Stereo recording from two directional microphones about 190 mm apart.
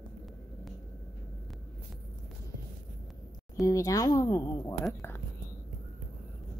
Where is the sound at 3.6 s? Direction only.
15° left (ahead or behind).